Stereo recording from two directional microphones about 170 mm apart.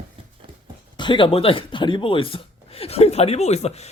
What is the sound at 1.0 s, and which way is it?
Speech, 30° left (ahead or behind).